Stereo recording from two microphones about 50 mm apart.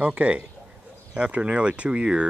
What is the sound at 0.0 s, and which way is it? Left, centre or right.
Speech, right.